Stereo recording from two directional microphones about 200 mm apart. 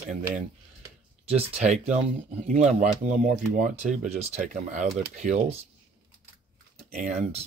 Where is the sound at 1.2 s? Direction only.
30° right (ahead or behind).